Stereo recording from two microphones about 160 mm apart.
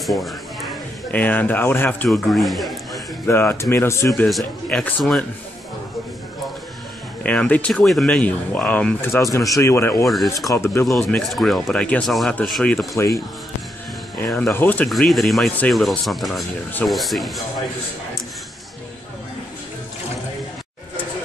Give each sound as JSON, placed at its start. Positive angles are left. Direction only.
{"t": 0.0, "sound": "a sound", "side_deg": 0}
{"t": 1.1, "sound": "speech", "side_deg": 10}
{"t": 2.0, "sound": "speech", "side_deg": 0}
{"t": 3.3, "sound": "speech", "side_deg": 15}
{"t": 4.1, "sound": "speech", "side_deg": 0}
{"t": 7.2, "sound": "speech", "side_deg": 10}
{"t": 9.6, "sound": "speech", "side_deg": 15}
{"t": 10.0, "sound": "speech", "side_deg": 0}
{"t": 10.5, "sound": "speech", "side_deg": 15}
{"t": 10.9, "sound": "speech", "side_deg": 0}
{"t": 12.9, "sound": "speech", "side_deg": 20}
{"t": 14.3, "sound": "speech", "side_deg": 10}
{"t": 14.9, "sound": "speech", "side_deg": 0}